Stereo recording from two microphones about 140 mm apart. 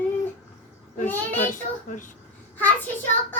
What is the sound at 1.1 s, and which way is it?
Child singing, 15° left (ahead or behind).